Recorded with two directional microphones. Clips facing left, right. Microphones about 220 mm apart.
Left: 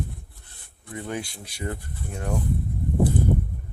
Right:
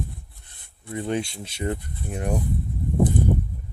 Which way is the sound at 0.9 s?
25° right (ahead or behind).